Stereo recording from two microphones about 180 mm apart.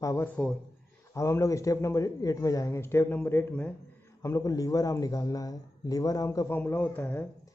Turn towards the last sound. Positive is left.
turn(degrees=10)  # may be behind; listen again after turning